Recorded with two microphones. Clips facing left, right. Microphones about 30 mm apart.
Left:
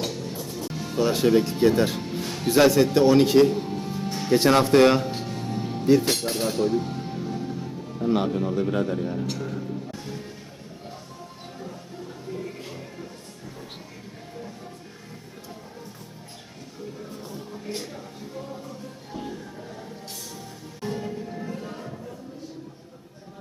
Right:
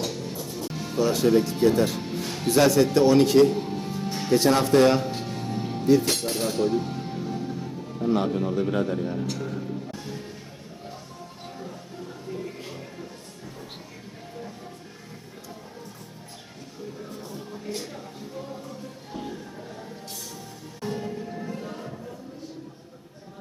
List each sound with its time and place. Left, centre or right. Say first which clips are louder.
0.1 s music: even; centre
0.9 s speech: left 1 dB; left
2.0 s music: even; centre
2.6 s a man's voice: left 1 dB; centre
3.6 s music: even; centre
4.4 s speech: left 2 dB; left
4.9 s music: left 1 dB; centre
6.0 s a man's voice: left 1 dB; centre
10.1 s music: even; centre
12.3 s music: left 1 dB; centre
18.3 s music: even; centre
20.8 s music: even; centre